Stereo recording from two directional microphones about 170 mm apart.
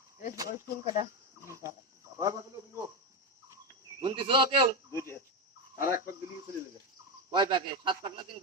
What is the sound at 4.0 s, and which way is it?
Speech, 30° right (ahead or behind).